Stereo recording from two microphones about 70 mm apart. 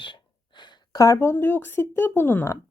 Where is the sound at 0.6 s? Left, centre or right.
Left.